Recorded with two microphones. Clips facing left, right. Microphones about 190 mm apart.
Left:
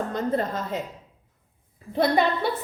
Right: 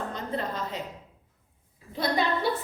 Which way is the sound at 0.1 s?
45° left (ahead or behind).